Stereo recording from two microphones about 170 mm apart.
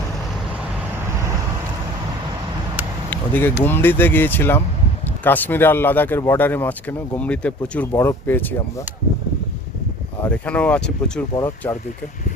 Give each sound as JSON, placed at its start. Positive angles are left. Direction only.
{"t": 3.1, "sound": "a sound", "side_deg": 10}
{"t": 3.6, "sound": "speech", "side_deg": 10}
{"t": 10.2, "sound": "speech", "side_deg": 10}
{"t": 11.3, "sound": "speech", "side_deg": 15}